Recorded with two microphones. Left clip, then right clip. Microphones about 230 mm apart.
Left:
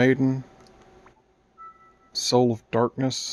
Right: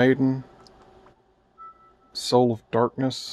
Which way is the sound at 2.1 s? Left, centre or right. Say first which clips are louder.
Right 1 dB; centre.